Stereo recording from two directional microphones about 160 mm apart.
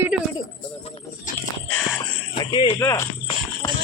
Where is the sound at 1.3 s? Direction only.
55° left (ahead or behind).